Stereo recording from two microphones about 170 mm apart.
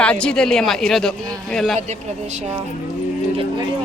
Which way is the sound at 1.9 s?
40° right (ahead or behind).